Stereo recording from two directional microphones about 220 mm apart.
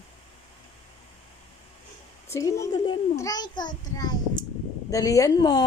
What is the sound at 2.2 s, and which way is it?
A child's voice, 15° left (ahead or behind).